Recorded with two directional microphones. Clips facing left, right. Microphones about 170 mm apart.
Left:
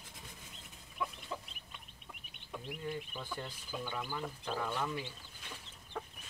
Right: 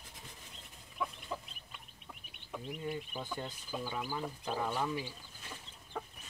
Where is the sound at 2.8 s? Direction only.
10° right (ahead or behind).